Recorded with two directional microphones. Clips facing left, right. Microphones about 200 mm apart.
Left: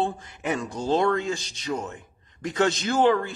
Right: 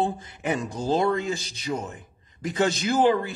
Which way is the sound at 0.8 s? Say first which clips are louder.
Left 1 dB; centre (ahead or behind).